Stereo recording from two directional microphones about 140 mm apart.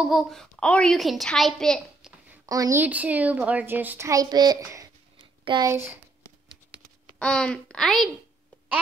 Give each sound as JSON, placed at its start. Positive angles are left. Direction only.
{"t": 0.0, "sound": "a woman's voice", "side_deg": 0}
{"t": 2.4, "sound": "speech", "side_deg": -25}
{"t": 2.8, "sound": "a child's voice", "side_deg": -10}
{"t": 5.7, "sound": "a child's voice", "side_deg": -20}
{"t": 7.2, "sound": "a woman's voice", "side_deg": 5}